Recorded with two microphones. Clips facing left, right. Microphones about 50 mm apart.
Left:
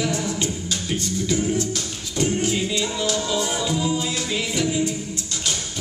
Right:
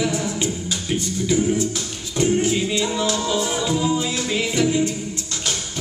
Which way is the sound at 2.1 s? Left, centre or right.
Right.